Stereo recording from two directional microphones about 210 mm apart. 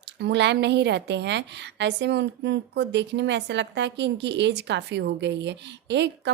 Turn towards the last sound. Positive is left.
turn(degrees=-55)  # may be behind; listen again after turning